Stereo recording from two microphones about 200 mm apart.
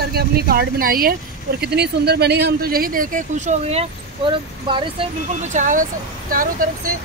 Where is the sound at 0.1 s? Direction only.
50° right (ahead or behind); by 4.8 s 25° right (ahead or behind).